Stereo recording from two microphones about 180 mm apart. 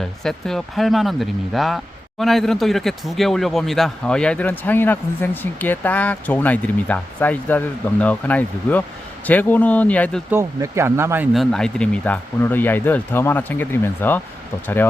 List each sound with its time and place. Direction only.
0.2 s speech: centre (ahead or behind)
10.3 s speech: 15° right (ahead or behind)
11.3 s speech: 5° left (ahead or behind)